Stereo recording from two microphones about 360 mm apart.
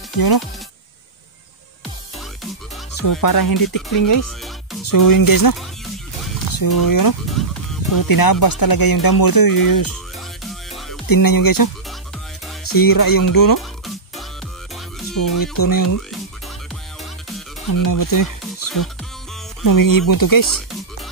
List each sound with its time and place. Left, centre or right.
2.9 s speech: left
7.4 s music: centre
7.9 s speech: left
10.1 s music: centre
11.1 s speech: left
12.7 s speech: left
13.6 s music: centre
15.3 s speech: left
17.7 s speech: left